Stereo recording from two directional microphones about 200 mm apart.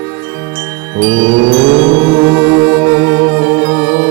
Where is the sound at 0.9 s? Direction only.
5° right (ahead or behind).